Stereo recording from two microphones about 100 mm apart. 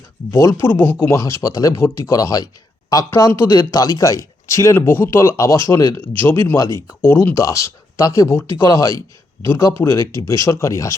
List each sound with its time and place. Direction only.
0.3 s speech: 30° left (ahead or behind)